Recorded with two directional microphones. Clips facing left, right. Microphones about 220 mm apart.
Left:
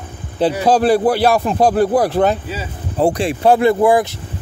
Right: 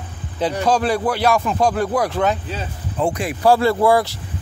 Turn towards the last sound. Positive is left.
turn(degrees=20)  # may be behind; listen again after turning